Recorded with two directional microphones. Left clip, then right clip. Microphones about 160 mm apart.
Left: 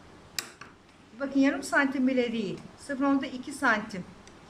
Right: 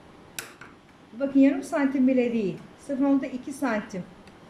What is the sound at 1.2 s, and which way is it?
A woman's voice, 20° right (ahead or behind).